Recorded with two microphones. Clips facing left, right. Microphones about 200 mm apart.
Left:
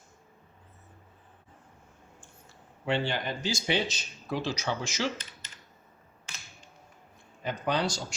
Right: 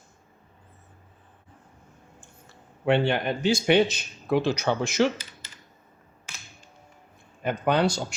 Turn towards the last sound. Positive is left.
turn(degrees=-60)  # may be behind; listen again after turning